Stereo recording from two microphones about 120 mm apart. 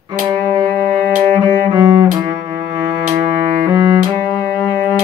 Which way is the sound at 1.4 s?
35° right (ahead or behind).